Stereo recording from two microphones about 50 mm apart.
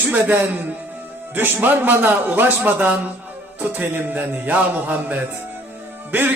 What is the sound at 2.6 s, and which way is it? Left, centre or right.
A man's voice, right.